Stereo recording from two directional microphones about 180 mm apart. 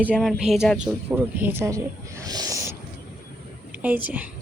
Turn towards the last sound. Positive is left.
turn(degrees=-10)  # may be behind; listen again after turning